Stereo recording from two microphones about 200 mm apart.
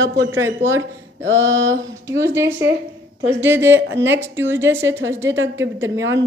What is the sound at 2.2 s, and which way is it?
A woman's voice, 15° right (ahead or behind).